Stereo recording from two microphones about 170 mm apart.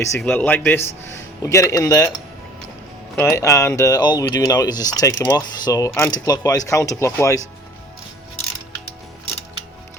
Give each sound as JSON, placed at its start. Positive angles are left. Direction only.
{"t": 0.2, "sound": "a man's voice", "side_deg": 10}
{"t": 3.2, "sound": "speech", "side_deg": 15}